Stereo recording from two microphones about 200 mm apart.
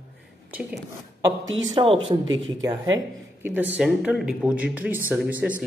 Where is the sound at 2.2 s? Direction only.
70° right (ahead or behind).